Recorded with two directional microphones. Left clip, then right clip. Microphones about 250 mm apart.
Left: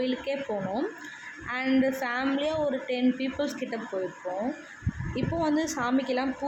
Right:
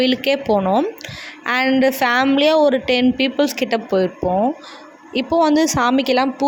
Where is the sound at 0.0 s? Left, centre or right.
Right.